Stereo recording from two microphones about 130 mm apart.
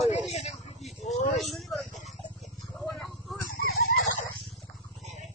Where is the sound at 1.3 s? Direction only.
Centre (ahead or behind).